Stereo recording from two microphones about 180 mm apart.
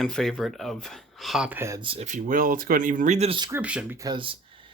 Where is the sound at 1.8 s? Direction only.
35° right (ahead or behind).